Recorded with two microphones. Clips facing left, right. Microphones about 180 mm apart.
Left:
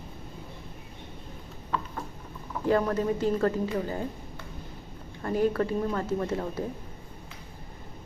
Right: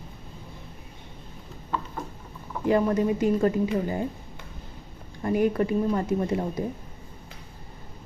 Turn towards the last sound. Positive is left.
turn(degrees=-20)  # may be behind; listen again after turning